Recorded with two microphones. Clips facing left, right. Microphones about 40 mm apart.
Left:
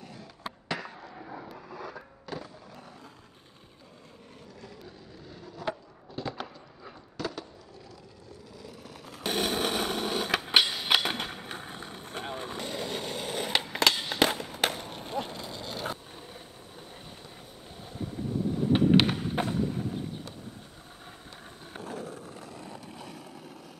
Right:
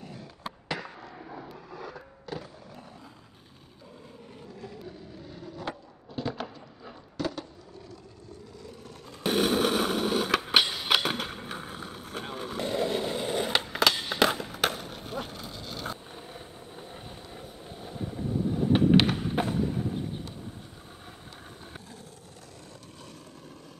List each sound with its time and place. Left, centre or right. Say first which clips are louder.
0.0 s skateboard: right 1 dB; centre
4.6 s skateboard: right 5 dB; centre
7.2 s a sound: right 3 dB; centre
8.6 s a sound: left 2 dB; centre
12.6 s skateboard: right 9 dB; centre
13.7 s fireworks: right 1 dB; centre
14.4 s skateboard: right 1 dB; centre
15.3 s dog: left 2 dB; left
16.1 s vehicle: right 2 dB; centre
18.7 s skateboard: right 1 dB; centre
21.8 s skateboard: left 9 dB; left